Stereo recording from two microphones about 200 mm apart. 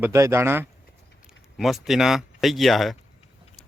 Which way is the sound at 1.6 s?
Centre (ahead or behind).